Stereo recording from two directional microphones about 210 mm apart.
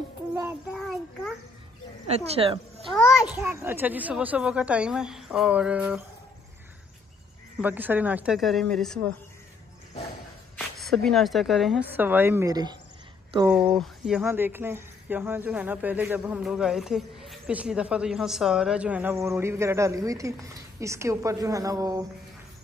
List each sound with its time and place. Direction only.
0.7 s a sound: centre (ahead or behind)
2.0 s speech: 30° right (ahead or behind)
3.3 s speech: 10° right (ahead or behind)
7.6 s speech: 10° right (ahead or behind)
10.5 s speech: centre (ahead or behind); by 12.7 s 20° right (ahead or behind)
13.7 s speech: 5° right (ahead or behind)